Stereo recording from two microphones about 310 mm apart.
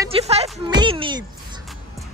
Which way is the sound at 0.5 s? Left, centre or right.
Centre.